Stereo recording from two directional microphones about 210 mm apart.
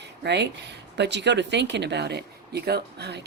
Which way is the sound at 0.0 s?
55° right (ahead or behind).